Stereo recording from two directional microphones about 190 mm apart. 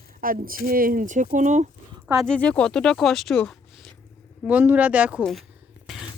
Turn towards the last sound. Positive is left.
turn(degrees=0)  # may be behind; listen again after turning